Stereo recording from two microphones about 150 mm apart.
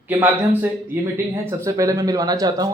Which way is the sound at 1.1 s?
20° right (ahead or behind).